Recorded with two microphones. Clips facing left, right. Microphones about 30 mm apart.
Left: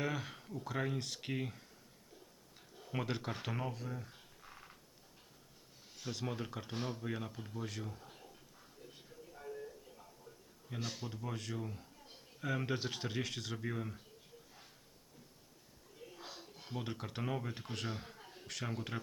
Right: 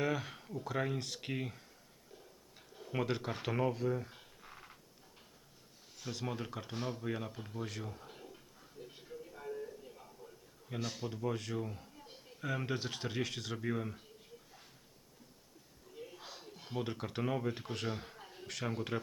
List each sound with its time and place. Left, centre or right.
0.0 s a man's voice: centre
2.7 s a sound: centre
6.0 s a man's voice: centre
9.0 s music: right
9.6 s a sound: centre
10.8 s a man's voice: centre
16.1 s speech: centre